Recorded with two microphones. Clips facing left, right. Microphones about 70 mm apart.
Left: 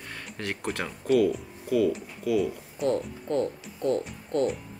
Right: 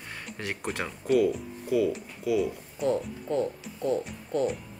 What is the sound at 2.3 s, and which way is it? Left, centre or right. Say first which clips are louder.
Speech: left 1 dB; centre.